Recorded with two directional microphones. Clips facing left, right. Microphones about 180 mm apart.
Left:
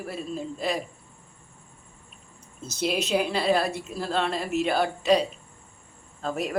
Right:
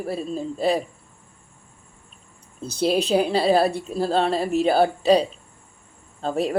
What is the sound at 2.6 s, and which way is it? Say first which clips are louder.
Speech: right 6 dB; 30° right (ahead or behind).